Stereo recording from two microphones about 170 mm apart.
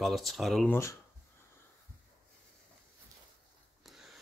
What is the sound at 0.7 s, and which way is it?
Speech, 15° left (ahead or behind).